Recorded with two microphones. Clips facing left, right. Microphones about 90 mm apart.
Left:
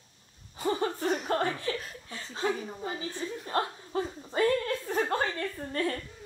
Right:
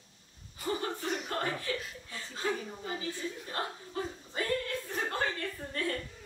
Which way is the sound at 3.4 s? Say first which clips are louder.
Left 6 dB; 40° left (ahead or behind).